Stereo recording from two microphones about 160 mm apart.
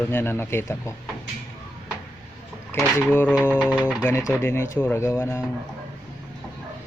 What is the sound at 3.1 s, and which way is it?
Speech, 15° left (ahead or behind).